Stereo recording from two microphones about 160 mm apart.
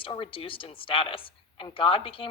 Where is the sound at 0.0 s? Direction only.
35° left (ahead or behind).